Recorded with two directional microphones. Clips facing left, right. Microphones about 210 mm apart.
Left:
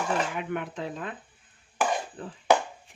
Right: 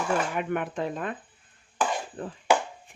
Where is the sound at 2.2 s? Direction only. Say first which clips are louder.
Right 4 dB; 45° right (ahead or behind).